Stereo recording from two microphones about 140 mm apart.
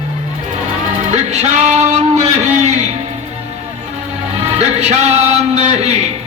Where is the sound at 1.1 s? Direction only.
50° right (ahead or behind).